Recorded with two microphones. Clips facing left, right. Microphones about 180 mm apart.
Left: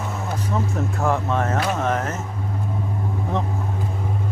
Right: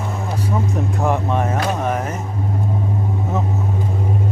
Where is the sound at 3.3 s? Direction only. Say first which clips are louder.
Right 1 dB; 5° right (ahead or behind).